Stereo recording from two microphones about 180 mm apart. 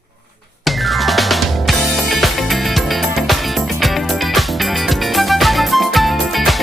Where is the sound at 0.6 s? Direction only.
Centre (ahead or behind).